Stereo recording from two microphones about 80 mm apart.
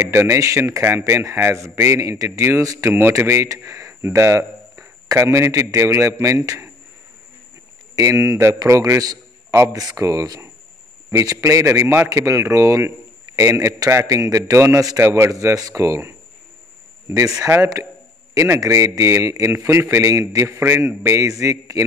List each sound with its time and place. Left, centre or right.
0.0 s speech: right
2.9 s speech: right
7.9 s speech: right
8.9 s a sound: right
9.6 s speech: right
17.4 s speech: right
18.3 s speech: right
20.4 s speech: right